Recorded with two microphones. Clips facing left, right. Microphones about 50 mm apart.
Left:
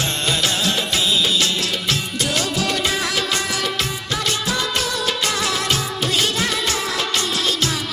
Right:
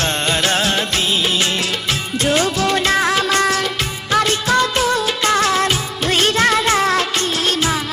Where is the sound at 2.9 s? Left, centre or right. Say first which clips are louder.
Right 6 dB; right.